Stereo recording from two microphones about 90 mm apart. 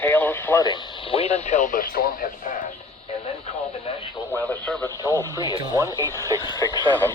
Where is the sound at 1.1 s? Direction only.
90° left.